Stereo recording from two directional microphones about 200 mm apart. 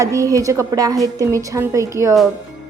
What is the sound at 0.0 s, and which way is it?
A woman's voice, 15° right (ahead or behind).